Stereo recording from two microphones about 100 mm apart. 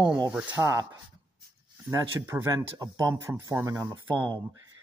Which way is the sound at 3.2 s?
25° right (ahead or behind).